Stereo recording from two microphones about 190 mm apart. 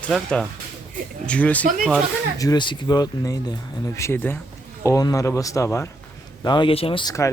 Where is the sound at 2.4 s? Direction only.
20° left (ahead or behind).